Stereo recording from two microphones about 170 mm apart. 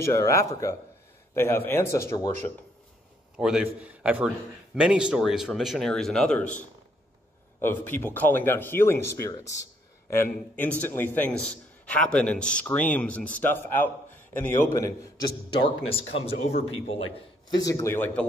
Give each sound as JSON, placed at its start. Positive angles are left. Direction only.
{"t": 0.0, "sound": "a man's voice", "side_deg": 15}
{"t": 3.3, "sound": "a man's voice", "side_deg": -5}
{"t": 7.6, "sound": "a man's voice", "side_deg": 10}
{"t": 15.5, "sound": "speech", "side_deg": 30}
{"t": 17.5, "sound": "a man's voice", "side_deg": 20}